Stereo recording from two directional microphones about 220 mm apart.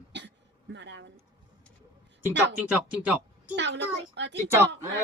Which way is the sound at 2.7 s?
5° right (ahead or behind).